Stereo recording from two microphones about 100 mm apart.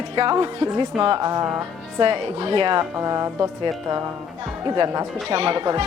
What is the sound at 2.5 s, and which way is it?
Speech, 50° right (ahead or behind).